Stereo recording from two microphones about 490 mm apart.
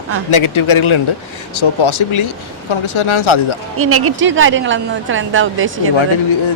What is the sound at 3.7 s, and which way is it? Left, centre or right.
A woman's voice, right.